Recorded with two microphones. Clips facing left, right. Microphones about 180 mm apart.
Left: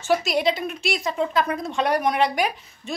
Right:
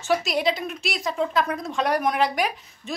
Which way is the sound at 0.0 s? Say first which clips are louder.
Left 2 dB; centre (ahead or behind).